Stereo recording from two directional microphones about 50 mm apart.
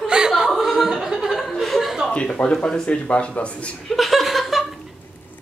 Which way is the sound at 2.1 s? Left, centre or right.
Left.